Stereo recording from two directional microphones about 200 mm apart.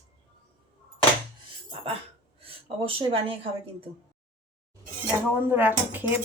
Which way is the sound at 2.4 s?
25° right (ahead or behind).